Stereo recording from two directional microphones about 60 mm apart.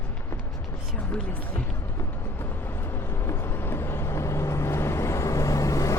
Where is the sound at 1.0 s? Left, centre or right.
Left.